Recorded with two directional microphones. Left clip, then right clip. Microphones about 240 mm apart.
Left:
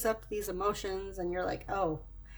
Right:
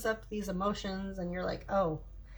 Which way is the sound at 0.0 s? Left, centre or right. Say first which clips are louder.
Left 2 dB; left.